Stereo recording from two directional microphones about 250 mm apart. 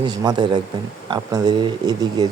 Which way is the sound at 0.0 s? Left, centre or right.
Centre.